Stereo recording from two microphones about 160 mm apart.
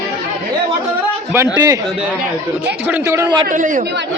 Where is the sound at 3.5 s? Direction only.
55° right (ahead or behind).